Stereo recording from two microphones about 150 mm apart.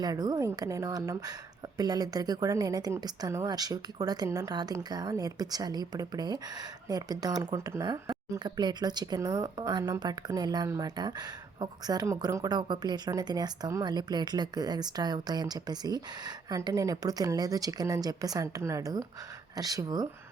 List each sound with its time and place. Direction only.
0.0 s speech: 25° right (ahead or behind)